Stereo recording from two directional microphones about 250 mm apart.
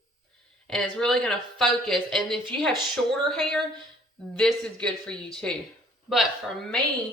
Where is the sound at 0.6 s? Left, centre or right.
Centre.